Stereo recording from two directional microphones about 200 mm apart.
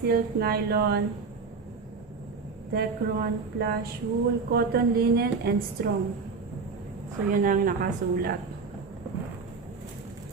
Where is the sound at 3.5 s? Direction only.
50° right (ahead or behind).